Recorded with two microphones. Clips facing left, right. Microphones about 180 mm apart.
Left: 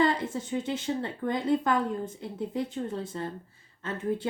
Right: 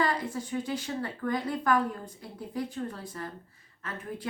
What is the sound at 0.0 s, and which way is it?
Speech, 25° left (ahead or behind).